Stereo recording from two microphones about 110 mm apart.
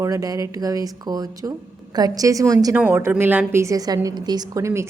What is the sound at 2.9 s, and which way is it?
A woman's voice, 20° right (ahead or behind).